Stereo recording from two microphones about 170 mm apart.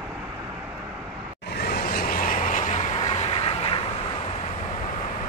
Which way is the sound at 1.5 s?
65° left (ahead or behind).